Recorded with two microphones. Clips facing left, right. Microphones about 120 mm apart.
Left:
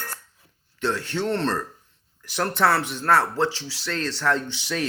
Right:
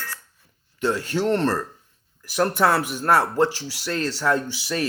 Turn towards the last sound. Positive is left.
turn(degrees=-5)  # may be behind; listen again after turning